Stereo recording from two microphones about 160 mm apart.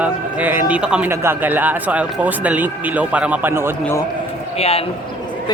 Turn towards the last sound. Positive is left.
turn(degrees=40)  # may be behind; listen again after turning